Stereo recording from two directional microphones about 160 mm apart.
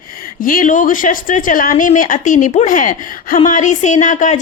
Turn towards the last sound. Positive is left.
turn(degrees=50)  # may be behind; listen again after turning